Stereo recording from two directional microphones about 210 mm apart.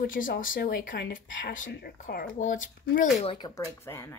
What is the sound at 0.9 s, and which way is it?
Speech, 60° left (ahead or behind).